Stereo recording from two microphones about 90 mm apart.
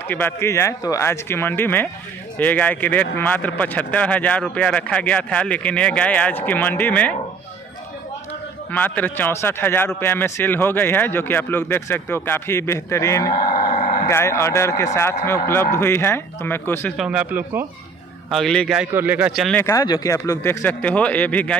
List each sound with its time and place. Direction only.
0.1 s a man's voice: 20° left (ahead or behind)
0.5 s a man's voice: 30° left (ahead or behind); by 7.2 s 15° left (ahead or behind)
8.7 s a man's voice: 20° left (ahead or behind)
16.9 s speech: 10° right (ahead or behind)
18.3 s speech: 5° left (ahead or behind)
18.9 s a man's voice: 20° right (ahead or behind)
19.8 s speech: 45° left (ahead or behind)
20.6 s speech: 15° left (ahead or behind)